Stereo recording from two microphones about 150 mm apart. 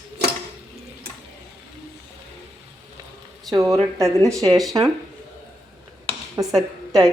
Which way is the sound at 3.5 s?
25° right (ahead or behind).